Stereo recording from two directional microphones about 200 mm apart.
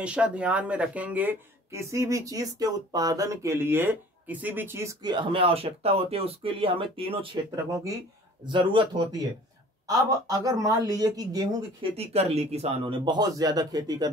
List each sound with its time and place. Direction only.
0.0 s speech: 5° right (ahead or behind); by 7.2 s 25° right (ahead or behind)
8.5 s a man's voice: 25° right (ahead or behind)
12.0 s a man's voice: 30° right (ahead or behind)